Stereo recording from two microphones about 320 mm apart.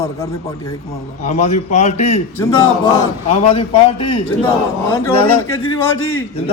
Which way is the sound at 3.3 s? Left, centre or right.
Left.